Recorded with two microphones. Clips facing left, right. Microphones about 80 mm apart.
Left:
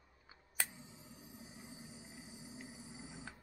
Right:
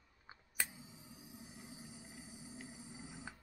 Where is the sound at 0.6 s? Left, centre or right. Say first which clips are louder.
Even; centre.